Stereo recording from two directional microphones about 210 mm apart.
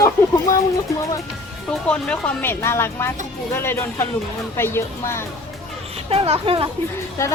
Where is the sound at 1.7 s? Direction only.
5° left (ahead or behind).